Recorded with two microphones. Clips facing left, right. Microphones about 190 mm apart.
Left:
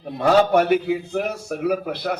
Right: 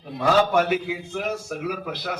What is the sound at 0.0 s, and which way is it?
Speech, 60° left (ahead or behind).